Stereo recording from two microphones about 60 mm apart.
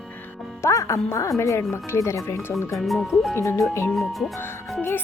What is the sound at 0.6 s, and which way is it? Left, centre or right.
Speech, left.